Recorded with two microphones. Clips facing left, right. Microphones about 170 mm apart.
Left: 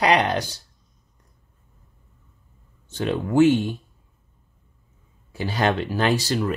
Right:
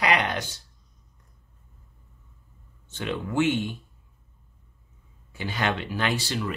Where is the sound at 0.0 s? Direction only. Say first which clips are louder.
Left 5 dB; 35° left (ahead or behind).